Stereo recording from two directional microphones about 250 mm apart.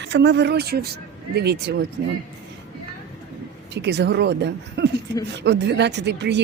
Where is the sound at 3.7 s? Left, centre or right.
Right.